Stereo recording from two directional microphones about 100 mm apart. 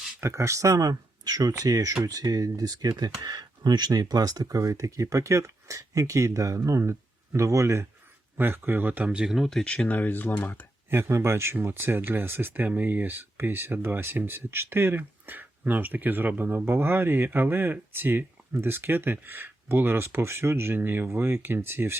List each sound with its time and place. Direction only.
0.2 s speech: 30° right (ahead or behind); by 10.7 s 20° left (ahead or behind)
10.8 s speech: 25° right (ahead or behind)